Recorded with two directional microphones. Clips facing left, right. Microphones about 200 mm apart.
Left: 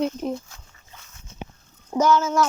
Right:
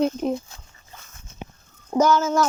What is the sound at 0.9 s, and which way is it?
Dog, 45° right (ahead or behind).